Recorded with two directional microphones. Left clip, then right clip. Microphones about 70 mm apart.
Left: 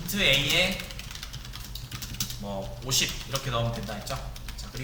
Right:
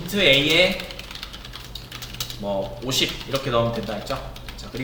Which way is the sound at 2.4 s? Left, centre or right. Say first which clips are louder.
Right 10 dB; left.